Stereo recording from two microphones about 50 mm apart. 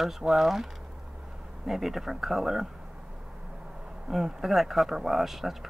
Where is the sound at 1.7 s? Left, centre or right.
Centre.